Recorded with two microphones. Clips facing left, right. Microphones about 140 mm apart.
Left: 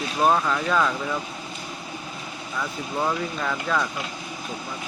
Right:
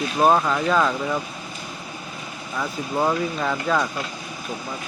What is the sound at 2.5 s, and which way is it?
Speech, 20° right (ahead or behind).